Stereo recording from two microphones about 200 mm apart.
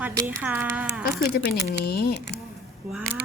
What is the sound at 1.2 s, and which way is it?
Speech, 55° left (ahead or behind).